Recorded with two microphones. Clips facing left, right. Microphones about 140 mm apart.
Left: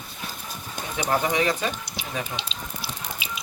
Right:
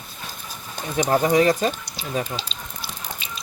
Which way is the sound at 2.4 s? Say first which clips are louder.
Left 1 dB; 5° left (ahead or behind).